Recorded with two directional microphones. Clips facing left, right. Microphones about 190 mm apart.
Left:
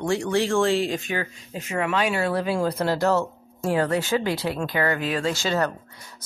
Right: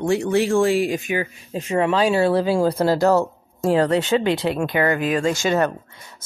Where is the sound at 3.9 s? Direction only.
20° right (ahead or behind).